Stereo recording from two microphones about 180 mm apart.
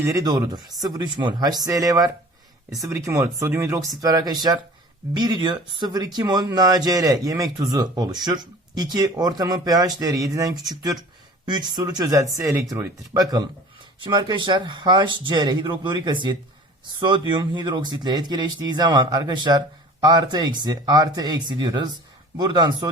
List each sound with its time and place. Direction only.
0.0 s speech: 20° right (ahead or behind)